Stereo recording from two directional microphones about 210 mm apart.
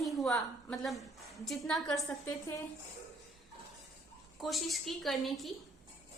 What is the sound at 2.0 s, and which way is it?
Speech, 15° left (ahead or behind).